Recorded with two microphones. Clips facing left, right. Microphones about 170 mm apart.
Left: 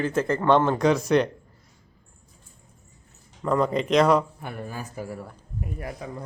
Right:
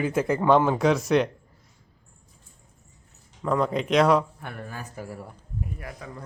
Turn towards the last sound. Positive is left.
turn(degrees=25)  # may be behind; listen again after turning